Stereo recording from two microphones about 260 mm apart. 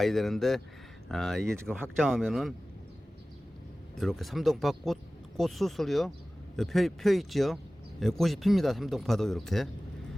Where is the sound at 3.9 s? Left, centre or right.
Centre.